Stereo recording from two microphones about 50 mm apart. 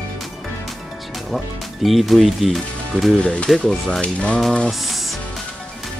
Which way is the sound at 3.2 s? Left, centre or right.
Left.